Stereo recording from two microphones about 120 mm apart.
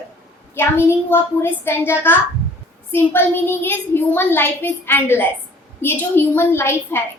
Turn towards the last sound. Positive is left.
turn(degrees=20)  # may be behind; listen again after turning